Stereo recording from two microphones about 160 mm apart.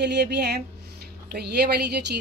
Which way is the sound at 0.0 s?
90° right.